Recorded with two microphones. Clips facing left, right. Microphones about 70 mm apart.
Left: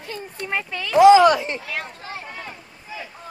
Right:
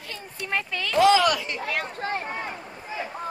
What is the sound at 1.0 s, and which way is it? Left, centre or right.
Speech, left.